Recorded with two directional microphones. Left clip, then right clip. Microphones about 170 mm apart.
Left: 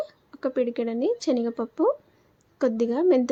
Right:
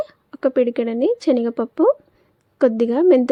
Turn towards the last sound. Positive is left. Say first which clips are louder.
# right 7 dB
turn(degrees=-45)  # may be behind; listen again after turning